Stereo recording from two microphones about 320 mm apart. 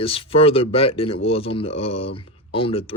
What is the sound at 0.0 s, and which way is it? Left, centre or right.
Speech, centre.